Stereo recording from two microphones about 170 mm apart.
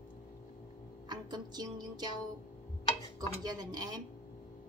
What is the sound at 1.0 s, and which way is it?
Music, 25° right (ahead or behind).